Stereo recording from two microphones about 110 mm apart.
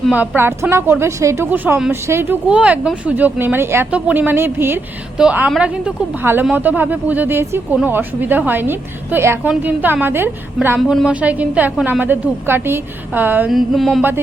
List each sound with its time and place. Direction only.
0.1 s a woman's voice: 15° right (ahead or behind)
2.5 s a woman's voice: 10° right (ahead or behind)
5.1 s a woman's voice: 5° right (ahead or behind)
10.8 s a woman's voice: 5° right (ahead or behind)
13.5 s mantra: centre (ahead or behind)